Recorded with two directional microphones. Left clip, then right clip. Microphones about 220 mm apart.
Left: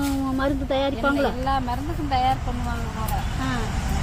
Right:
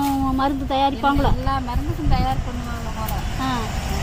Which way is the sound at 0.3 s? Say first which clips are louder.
Right 3 dB; 45° right (ahead or behind).